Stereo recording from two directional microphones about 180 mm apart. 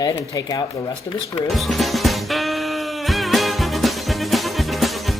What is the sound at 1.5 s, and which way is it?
Music, centre (ahead or behind).